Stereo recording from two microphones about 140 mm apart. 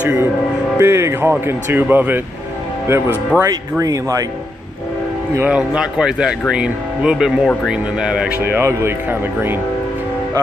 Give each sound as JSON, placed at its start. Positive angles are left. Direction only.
{"t": 0.0, "sound": "music", "side_deg": -15}
{"t": 0.7, "sound": "speech", "side_deg": -20}
{"t": 3.8, "sound": "speech", "side_deg": -25}
{"t": 5.5, "sound": "speech", "side_deg": -5}